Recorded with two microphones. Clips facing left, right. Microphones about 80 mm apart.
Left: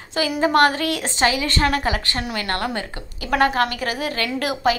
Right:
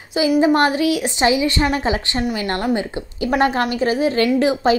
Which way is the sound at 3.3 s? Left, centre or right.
Right.